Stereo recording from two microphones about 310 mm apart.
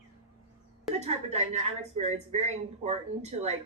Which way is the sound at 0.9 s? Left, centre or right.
Right.